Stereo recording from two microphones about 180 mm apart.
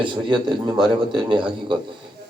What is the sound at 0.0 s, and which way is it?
A man's voice, 25° right (ahead or behind).